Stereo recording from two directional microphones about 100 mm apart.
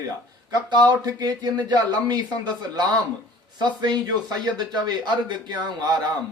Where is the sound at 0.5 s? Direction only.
45° right (ahead or behind).